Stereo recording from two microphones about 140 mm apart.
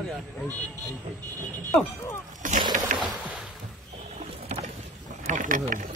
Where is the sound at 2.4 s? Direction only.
70° right (ahead or behind).